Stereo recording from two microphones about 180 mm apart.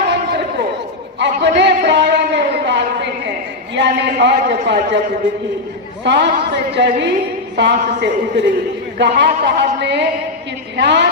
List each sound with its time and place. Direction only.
1.2 s a sound: 75° right (ahead or behind)
3.8 s a man's voice: 70° right (ahead or behind)
6.0 s a man's voice: 75° right (ahead or behind)